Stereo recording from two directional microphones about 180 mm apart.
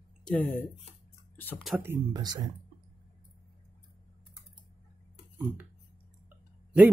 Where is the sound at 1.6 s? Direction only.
10° right (ahead or behind).